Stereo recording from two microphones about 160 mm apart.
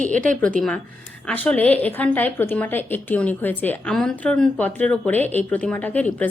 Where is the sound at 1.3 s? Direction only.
10° left (ahead or behind).